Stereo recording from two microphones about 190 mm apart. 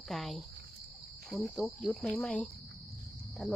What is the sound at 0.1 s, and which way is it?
Speech, centre (ahead or behind).